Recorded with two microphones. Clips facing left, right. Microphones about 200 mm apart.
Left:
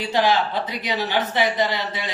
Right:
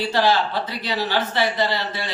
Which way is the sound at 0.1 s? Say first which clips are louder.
Left 2 dB; 15° left (ahead or behind).